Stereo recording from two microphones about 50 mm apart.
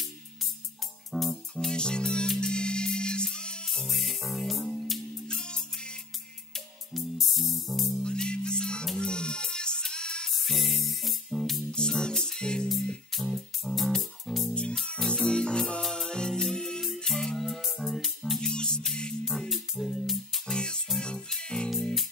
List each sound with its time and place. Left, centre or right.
1.1 s music: centre
1.7 s music: centre
3.6 s music: centre
6.5 s music: centre
8.0 s music: centre
10.3 s music: centre
11.7 s music: centre
13.1 s music: centre
14.5 s music: left; by 18.4 s centre
18.4 s music: centre
19.5 s music: centre
20.5 s music: centre